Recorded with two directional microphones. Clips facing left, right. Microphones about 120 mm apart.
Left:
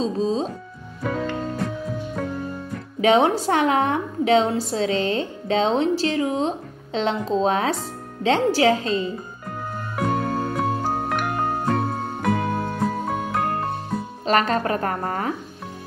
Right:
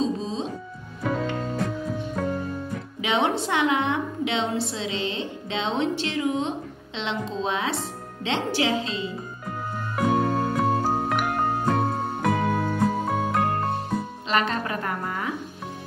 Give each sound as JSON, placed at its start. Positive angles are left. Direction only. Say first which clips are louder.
{"t": 0.0, "sound": "music", "louder": "left 4 dB", "side_deg": 35}
{"t": 1.0, "sound": "music", "louder": "left 1 dB", "side_deg": 0}
{"t": 3.0, "sound": "a woman's voice", "louder": "left 7 dB", "side_deg": 40}
{"t": 9.9, "sound": "music", "louder": "right 1 dB", "side_deg": 0}
{"t": 14.2, "sound": "speech", "louder": "left 7 dB", "side_deg": 45}